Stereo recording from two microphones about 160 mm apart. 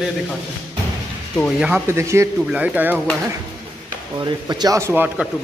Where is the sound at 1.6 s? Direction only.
10° right (ahead or behind).